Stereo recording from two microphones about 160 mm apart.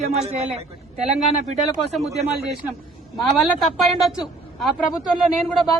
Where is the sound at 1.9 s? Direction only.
Centre (ahead or behind).